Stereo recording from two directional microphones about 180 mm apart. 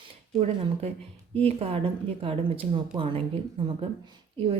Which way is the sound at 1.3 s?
35° right (ahead or behind).